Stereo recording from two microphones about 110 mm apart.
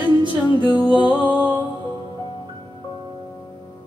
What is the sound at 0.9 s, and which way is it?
Music, 45° left (ahead or behind).